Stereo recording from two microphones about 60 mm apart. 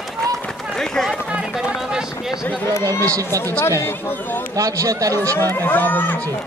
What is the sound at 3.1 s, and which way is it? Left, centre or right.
Speech, right.